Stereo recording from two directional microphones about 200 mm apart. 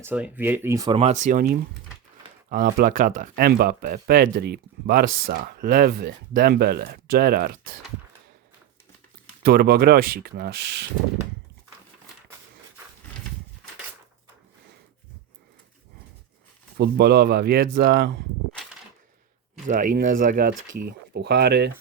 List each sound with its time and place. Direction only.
0.0 s speech: 10° right (ahead or behind); by 7.5 s 50° right (ahead or behind)
9.4 s speech: 50° right (ahead or behind)
16.7 s speech: 55° right (ahead or behind)
19.6 s speech: 40° right (ahead or behind)
20.8 s speech: 55° right (ahead or behind)